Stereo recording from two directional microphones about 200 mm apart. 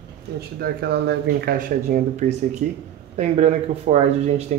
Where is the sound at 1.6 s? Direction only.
40° right (ahead or behind).